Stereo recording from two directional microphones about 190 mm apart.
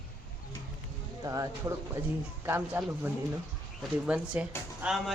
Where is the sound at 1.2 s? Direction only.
20° right (ahead or behind).